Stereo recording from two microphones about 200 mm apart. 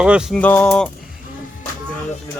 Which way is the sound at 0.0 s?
5° right (ahead or behind).